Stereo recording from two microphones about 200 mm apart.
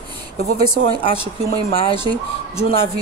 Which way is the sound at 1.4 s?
30° left (ahead or behind).